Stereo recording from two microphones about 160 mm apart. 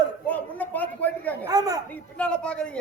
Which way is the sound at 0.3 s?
10° left (ahead or behind).